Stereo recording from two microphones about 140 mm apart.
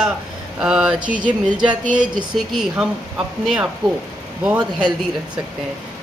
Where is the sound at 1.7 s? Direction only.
35° right (ahead or behind).